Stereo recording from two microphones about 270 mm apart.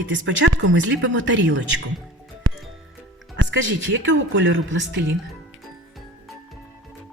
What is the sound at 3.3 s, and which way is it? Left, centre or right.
A woman's voice, right.